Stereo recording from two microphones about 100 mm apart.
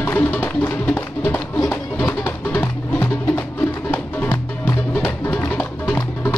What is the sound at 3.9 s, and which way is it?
Music, 20° left (ahead or behind).